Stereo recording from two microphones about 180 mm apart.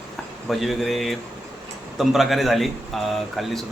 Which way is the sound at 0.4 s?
Centre (ahead or behind).